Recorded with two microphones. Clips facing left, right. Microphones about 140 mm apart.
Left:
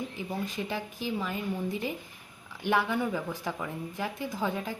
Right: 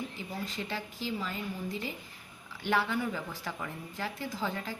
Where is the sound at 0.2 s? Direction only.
15° left (ahead or behind).